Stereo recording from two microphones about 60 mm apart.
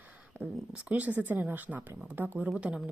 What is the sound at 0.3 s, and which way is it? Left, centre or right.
A woman's voice, right.